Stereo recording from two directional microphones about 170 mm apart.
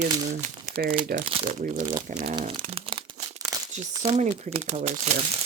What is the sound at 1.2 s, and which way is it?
Speech, 35° right (ahead or behind).